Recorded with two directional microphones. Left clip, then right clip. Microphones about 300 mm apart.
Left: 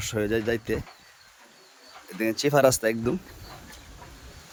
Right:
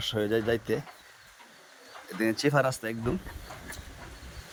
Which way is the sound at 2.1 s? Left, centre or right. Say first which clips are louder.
Left 3 dB; centre.